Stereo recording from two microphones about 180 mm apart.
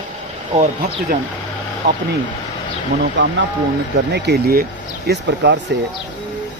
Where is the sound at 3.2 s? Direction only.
75° right (ahead or behind).